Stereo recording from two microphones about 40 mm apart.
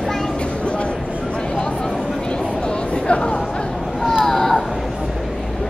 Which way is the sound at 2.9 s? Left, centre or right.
Left.